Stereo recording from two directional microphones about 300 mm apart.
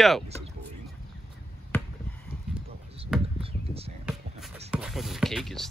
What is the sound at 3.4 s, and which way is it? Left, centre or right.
Basketball bounce, centre.